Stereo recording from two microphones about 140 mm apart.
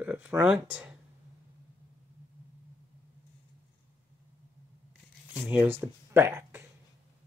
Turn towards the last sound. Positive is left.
turn(degrees=-15)  # may be behind; listen again after turning